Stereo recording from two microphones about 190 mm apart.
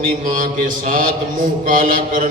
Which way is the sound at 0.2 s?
45° right (ahead or behind).